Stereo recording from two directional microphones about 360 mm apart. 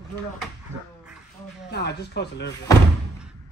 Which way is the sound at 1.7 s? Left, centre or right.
Left.